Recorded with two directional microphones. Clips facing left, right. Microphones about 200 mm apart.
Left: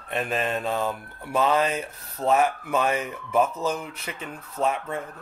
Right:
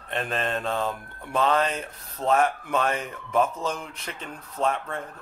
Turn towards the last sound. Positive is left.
turn(degrees=5)  # may be behind; listen again after turning